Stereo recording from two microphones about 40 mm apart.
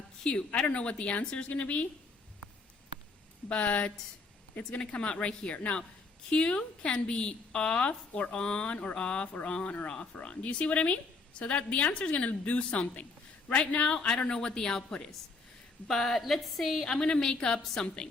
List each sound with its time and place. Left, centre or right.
0.3 s a woman's voice: left
3.5 s a woman's voice: left
12.1 s a woman's voice: left; by 14.8 s centre
15.9 s speech: centre
16.8 s a woman's voice: centre